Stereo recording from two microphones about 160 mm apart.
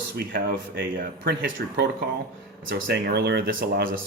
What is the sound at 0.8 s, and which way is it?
Speech, 65° right (ahead or behind).